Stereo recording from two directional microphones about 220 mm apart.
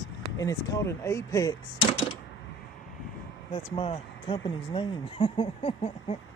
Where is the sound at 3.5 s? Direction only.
25° left (ahead or behind).